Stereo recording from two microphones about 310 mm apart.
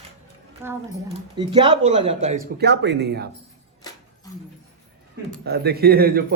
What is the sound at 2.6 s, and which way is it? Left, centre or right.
Speech, right.